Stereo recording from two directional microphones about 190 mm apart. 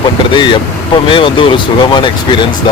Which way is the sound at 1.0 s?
25° left (ahead or behind).